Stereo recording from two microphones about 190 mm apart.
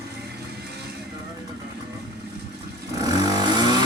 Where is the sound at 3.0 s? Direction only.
20° right (ahead or behind).